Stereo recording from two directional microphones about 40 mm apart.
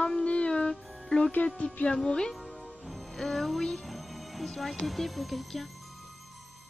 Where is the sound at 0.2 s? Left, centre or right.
Left.